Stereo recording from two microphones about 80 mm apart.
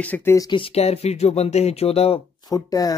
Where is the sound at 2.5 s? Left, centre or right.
Left.